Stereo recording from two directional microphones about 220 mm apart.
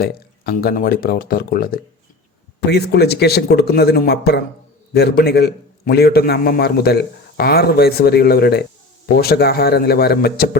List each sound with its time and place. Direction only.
0.0 s a man's voice: 45° left (ahead or behind)